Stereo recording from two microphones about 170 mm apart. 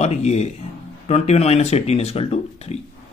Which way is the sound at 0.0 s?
40° left (ahead or behind).